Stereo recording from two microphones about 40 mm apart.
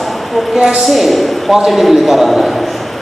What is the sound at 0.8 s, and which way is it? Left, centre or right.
A man's voice, centre.